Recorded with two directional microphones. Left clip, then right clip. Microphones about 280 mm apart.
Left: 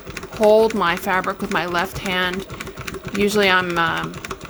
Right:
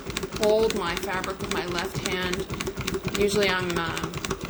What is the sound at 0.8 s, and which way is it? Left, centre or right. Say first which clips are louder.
Speech: left 9 dB; left.